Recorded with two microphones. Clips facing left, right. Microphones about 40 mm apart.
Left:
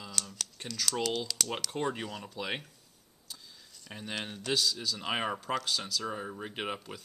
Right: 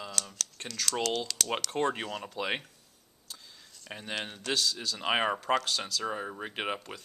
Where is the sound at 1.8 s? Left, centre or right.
Centre.